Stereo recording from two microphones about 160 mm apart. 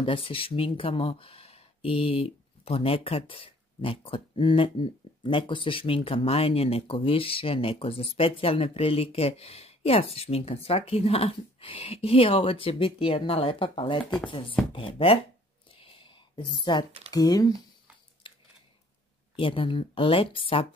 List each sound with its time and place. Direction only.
0.0 s speech: 35° left (ahead or behind)
15.7 s a sound: 35° left (ahead or behind)
17.1 s speech: 25° left (ahead or behind)
19.3 s speech: 35° left (ahead or behind)